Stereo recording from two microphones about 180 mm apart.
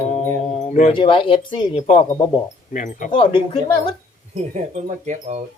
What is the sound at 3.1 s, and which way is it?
Speech, 30° left (ahead or behind).